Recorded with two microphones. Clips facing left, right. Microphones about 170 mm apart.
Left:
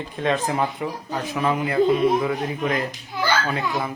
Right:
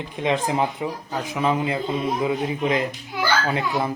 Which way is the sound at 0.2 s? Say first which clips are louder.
Even; 15° right (ahead or behind).